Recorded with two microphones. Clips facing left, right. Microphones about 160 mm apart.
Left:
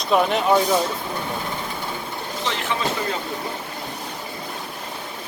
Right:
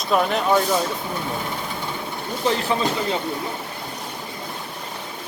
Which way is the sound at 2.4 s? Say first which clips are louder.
Right 5 dB; 35° right (ahead or behind).